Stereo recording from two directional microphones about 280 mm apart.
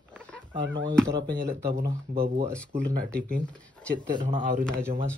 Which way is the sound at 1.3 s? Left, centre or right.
Right.